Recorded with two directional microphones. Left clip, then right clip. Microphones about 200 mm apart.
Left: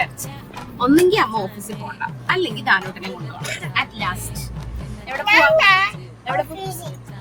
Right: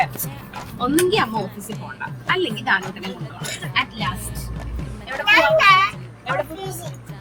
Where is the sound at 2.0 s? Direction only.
20° left (ahead or behind).